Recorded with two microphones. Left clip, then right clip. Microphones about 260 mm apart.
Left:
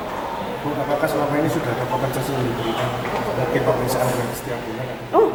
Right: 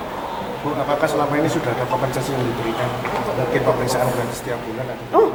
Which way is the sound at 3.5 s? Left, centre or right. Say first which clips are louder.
Right 2 dB; centre.